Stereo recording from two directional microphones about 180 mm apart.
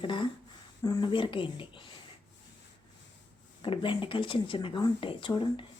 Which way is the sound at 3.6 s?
30° left (ahead or behind).